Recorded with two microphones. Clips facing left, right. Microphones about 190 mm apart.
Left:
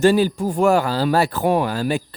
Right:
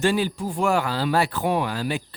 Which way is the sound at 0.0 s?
40° left (ahead or behind).